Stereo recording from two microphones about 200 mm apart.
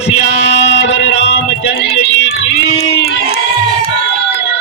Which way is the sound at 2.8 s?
50° left (ahead or behind).